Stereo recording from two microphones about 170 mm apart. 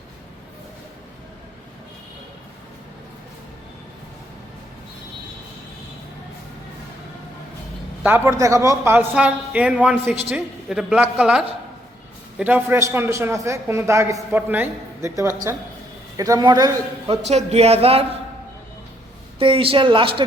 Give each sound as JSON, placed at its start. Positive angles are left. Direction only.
{"t": 8.0, "sound": "a man's voice", "side_deg": -15}
{"t": 17.2, "sound": "a man's voice", "side_deg": -40}
{"t": 19.4, "sound": "a man's voice", "side_deg": -30}